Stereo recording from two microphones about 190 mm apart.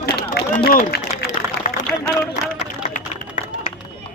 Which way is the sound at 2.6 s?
40° left (ahead or behind).